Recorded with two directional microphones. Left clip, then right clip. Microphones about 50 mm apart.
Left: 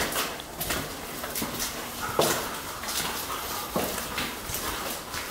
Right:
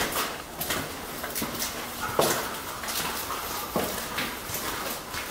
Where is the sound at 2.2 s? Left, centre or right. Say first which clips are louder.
Even; centre.